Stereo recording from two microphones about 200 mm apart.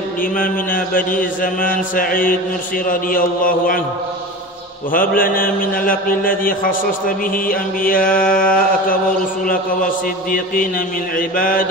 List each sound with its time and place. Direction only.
0.2 s mantra: 45° left (ahead or behind)
4.9 s mantra: 45° left (ahead or behind)
10.3 s mantra: 45° left (ahead or behind)